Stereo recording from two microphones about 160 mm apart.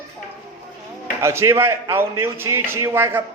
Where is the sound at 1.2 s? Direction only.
15° right (ahead or behind).